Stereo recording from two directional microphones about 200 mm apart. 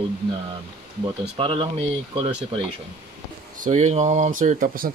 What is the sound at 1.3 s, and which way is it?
Speech, 25° right (ahead or behind).